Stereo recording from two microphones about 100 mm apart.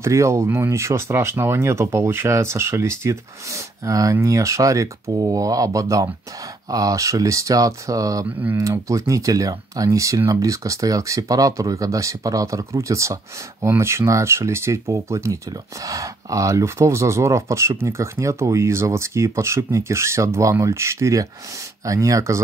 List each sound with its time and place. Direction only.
0.0 s speech: 30° right (ahead or behind)